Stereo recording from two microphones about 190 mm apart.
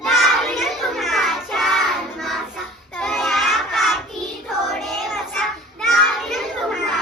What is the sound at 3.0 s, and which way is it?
Child singing, centre (ahead or behind).